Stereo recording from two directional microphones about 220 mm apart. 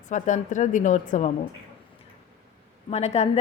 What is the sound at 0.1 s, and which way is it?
Speech, 35° left (ahead or behind).